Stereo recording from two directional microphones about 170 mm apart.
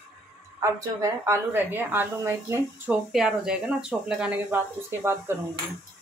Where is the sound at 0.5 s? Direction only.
20° right (ahead or behind).